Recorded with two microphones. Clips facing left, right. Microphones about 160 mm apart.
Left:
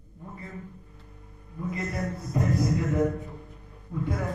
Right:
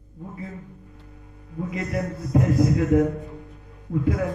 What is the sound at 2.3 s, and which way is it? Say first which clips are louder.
Speech: right 6 dB; 90° right.